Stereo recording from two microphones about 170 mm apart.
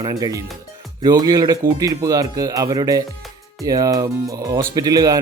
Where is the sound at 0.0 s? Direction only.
20° right (ahead or behind).